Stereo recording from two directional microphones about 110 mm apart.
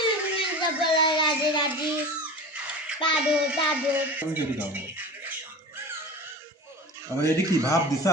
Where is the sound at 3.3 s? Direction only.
10° right (ahead or behind).